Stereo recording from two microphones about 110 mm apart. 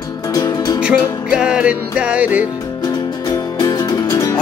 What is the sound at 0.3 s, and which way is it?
Music, 30° left (ahead or behind).